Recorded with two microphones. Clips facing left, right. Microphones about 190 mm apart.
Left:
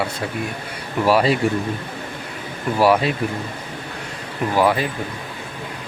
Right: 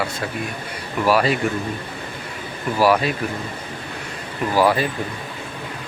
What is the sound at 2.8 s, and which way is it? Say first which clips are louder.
Speech: left 1 dB; 25° left (ahead or behind).